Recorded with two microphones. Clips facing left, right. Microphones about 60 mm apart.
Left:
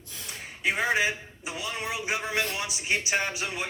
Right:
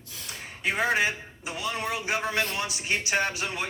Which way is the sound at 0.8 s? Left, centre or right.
Right.